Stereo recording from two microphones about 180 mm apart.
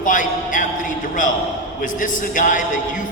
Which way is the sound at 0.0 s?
45° left (ahead or behind).